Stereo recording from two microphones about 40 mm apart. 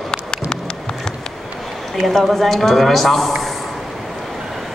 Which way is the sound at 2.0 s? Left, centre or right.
Centre.